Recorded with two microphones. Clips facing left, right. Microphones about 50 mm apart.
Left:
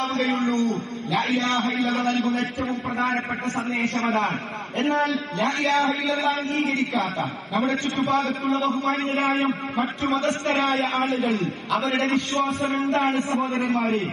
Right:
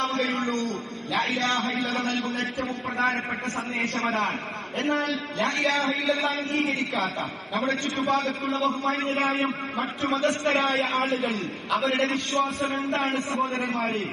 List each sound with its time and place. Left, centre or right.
0.0 s a man's voice: left
1.6 s a man's voice: left
3.9 s a man's voice: centre
5.4 s a man's voice: centre
7.5 s a man's voice: centre
9.8 s a man's voice: centre
12.0 s a man's voice: left
13.4 s a man's voice: centre